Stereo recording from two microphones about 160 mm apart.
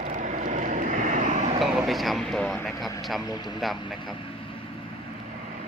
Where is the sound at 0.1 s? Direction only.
50° right (ahead or behind).